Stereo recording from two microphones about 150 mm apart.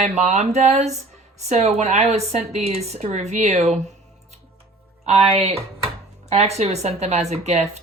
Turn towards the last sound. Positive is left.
turn(degrees=-45)  # may be behind; listen again after turning